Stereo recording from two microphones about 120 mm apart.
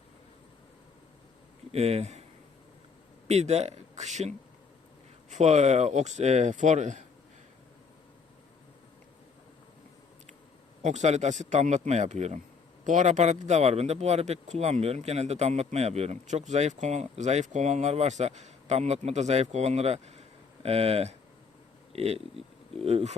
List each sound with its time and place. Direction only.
1.7 s speech: 60° right (ahead or behind)
3.2 s speech: 65° right (ahead or behind); by 7.0 s 80° right
10.8 s speech: 75° right (ahead or behind)
12.8 s speech: 90° right; by 23.1 s 55° right (ahead or behind)